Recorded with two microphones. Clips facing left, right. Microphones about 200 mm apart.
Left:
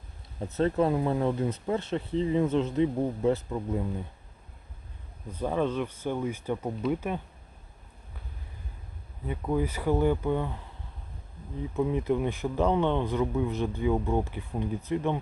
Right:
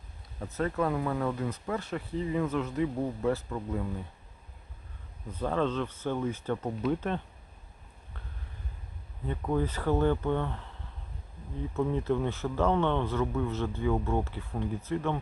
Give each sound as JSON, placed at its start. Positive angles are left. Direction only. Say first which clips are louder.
{"t": 0.3, "sound": "speech", "louder": "left 5 dB", "side_deg": 25}
{"t": 5.4, "sound": "speech", "louder": "left 1 dB", "side_deg": 15}
{"t": 9.2, "sound": "speech", "louder": "left 1 dB", "side_deg": 10}
{"t": 11.7, "sound": "speech", "louder": "left 2 dB", "side_deg": 15}